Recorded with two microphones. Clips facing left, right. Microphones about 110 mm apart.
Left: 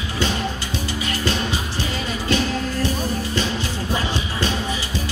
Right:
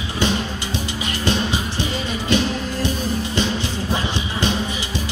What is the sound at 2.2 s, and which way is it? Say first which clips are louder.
Music: right 1 dB; 20° right (ahead or behind).